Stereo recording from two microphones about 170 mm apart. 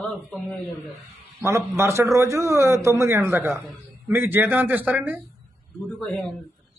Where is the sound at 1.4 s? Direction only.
15° right (ahead or behind).